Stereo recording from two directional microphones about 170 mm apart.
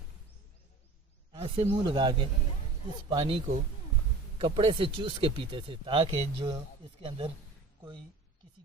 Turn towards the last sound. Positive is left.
turn(degrees=-30)  # may be behind; listen again after turning